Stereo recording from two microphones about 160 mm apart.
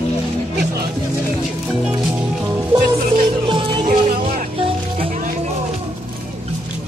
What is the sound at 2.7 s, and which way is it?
Music, 30° right (ahead or behind).